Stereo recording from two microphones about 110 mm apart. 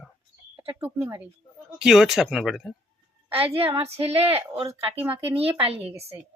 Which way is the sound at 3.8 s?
60° right (ahead or behind).